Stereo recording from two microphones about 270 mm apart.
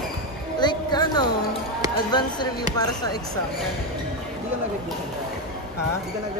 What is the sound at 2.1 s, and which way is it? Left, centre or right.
Speech, centre.